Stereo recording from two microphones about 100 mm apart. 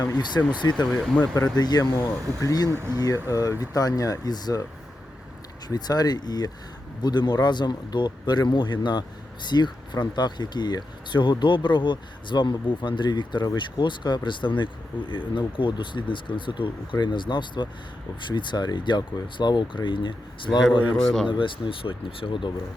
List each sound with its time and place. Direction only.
0.4 s speech: 25° left (ahead or behind)
0.7 s speech: 5° left (ahead or behind)
1.5 s speech: 40° left (ahead or behind)
2.6 s speech: 25° right (ahead or behind)
3.0 s speech: 35° left (ahead or behind)
5.6 s speech: 40° left (ahead or behind)
21.0 s speech: 5° left (ahead or behind)
21.2 s speech: 55° left (ahead or behind)